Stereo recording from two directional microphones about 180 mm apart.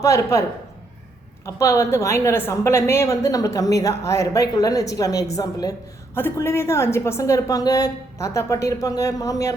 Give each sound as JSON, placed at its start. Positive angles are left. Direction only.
{"t": 0.0, "sound": "a woman's voice", "side_deg": 15}
{"t": 1.5, "sound": "a woman's voice", "side_deg": 15}